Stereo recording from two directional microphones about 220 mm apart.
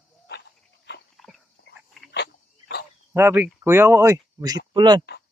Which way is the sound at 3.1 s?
10° right (ahead or behind).